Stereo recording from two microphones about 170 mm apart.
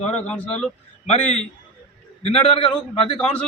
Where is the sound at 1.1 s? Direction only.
40° left (ahead or behind).